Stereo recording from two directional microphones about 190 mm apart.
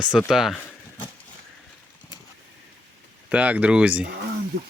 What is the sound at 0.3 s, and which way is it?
Speech, centre (ahead or behind).